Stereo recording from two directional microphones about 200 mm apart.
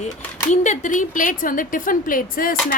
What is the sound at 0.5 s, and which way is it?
A woman's voice, 35° left (ahead or behind).